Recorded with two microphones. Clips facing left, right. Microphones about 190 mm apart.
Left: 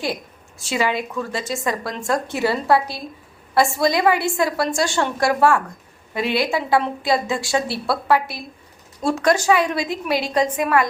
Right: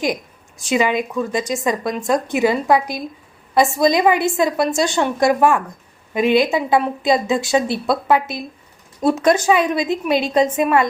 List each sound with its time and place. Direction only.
0.6 s a woman's voice: 15° right (ahead or behind)